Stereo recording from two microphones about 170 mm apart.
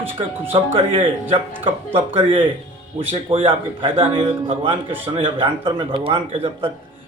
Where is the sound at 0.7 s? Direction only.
35° right (ahead or behind).